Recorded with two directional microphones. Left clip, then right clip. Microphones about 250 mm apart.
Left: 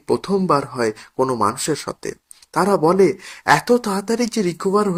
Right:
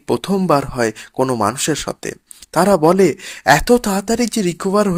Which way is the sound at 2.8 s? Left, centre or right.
Right.